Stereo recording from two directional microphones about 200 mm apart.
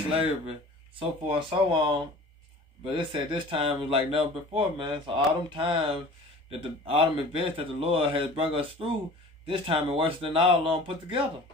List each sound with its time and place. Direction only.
0.9 s speech: 25° right (ahead or behind)